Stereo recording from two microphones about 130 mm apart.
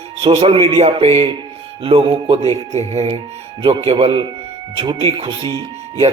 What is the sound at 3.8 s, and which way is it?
A man's voice, 45° right (ahead or behind).